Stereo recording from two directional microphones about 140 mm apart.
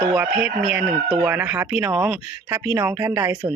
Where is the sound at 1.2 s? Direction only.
15° right (ahead or behind).